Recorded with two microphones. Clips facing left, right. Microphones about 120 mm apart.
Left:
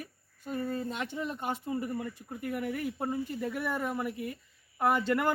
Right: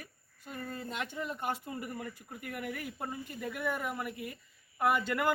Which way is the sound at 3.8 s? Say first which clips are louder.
Left 4 dB; centre (ahead or behind).